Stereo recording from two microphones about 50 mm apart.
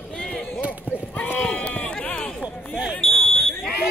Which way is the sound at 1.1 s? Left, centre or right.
Left.